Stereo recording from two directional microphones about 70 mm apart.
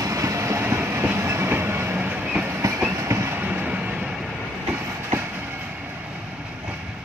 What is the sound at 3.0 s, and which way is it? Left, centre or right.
Train, right.